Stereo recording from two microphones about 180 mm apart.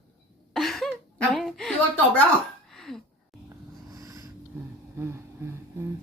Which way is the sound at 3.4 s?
20° right (ahead or behind).